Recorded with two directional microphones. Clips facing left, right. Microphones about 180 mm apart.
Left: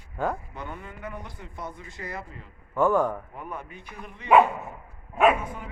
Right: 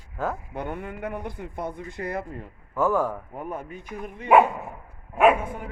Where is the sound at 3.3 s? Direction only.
45° right (ahead or behind).